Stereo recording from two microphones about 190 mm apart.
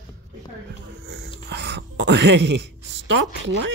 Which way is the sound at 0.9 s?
60° right (ahead or behind).